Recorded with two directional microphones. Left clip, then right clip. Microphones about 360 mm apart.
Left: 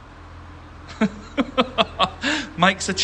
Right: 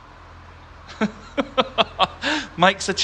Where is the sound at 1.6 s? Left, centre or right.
Centre.